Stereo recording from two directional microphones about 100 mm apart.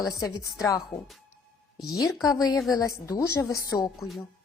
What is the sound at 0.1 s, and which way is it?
Speech, 35° left (ahead or behind).